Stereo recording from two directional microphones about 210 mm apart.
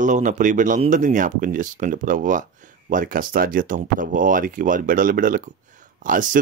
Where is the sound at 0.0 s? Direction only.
35° right (ahead or behind).